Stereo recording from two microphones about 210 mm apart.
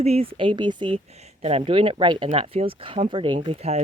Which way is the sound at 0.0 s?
30° right (ahead or behind).